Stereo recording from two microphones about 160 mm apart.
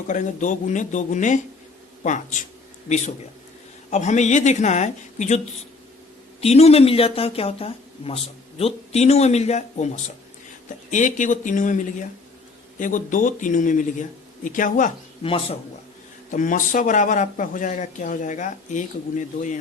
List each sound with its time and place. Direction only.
0.1 s speech: 50° left (ahead or behind)
3.8 s speech: 45° left (ahead or behind)
6.4 s speech: 40° left (ahead or behind)
15.2 s speech: 35° left (ahead or behind)
16.3 s speech: 55° left (ahead or behind)